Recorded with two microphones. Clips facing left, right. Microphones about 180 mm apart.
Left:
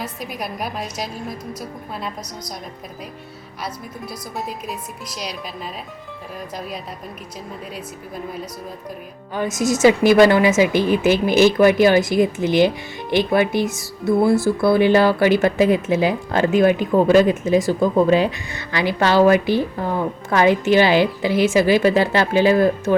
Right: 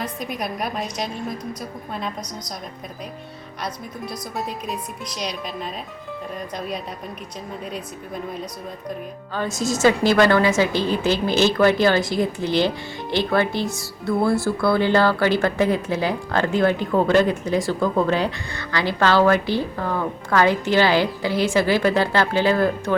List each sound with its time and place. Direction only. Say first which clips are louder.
0.0 s a woman's voice: right 1 dB; 5° left (ahead or behind)
3.6 s a woman's voice: even; 5° left (ahead or behind)
7.7 s a woman's voice: right 1 dB; 5° left (ahead or behind)
9.3 s a woman's voice: left 4 dB; 15° left (ahead or behind)